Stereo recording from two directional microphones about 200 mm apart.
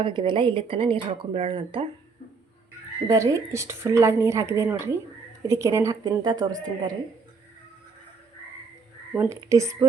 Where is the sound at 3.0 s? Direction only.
15° right (ahead or behind).